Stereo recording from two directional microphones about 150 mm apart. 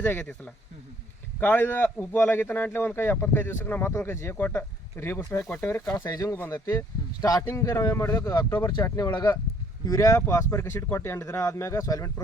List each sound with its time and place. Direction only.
0.0 s a man's voice: 10° left (ahead or behind)